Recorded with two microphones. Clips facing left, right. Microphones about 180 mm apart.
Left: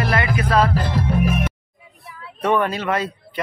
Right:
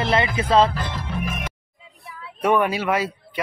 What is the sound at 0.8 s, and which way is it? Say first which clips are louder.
Music: left 8 dB; 55° left (ahead or behind).